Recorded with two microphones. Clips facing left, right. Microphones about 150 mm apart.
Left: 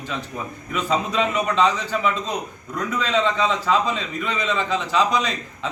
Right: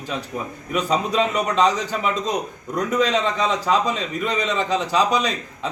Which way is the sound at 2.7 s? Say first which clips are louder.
Right 4 dB; 45° right (ahead or behind).